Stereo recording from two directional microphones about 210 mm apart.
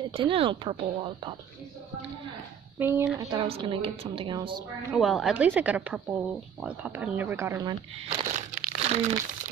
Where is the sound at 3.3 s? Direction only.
30° right (ahead or behind).